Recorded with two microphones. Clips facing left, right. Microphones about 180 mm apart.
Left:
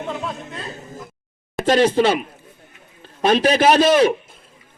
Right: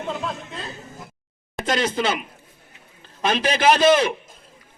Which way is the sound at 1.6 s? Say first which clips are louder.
Left 7 dB; 30° left (ahead or behind).